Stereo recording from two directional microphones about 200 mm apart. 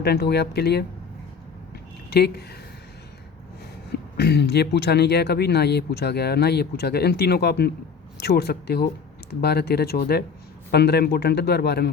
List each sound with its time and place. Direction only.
0.0 s speech: 55° left (ahead or behind)
2.0 s speech: 55° left (ahead or behind)
4.2 s speech: 55° left (ahead or behind)